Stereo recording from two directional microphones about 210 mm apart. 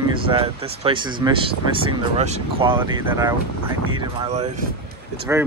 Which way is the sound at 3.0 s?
15° right (ahead or behind).